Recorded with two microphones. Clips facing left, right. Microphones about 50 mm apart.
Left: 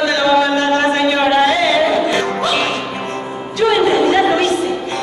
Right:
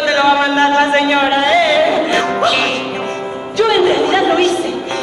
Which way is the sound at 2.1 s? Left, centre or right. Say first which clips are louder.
Right 3 dB; right.